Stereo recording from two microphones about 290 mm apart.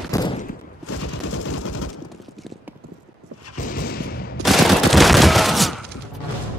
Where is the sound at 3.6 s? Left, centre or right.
Left.